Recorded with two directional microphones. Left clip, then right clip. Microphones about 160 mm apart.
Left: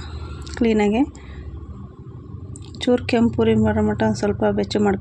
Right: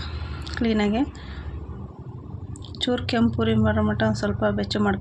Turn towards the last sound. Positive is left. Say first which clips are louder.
# left 5 dB
turn(degrees=25)  # may be behind; listen again after turning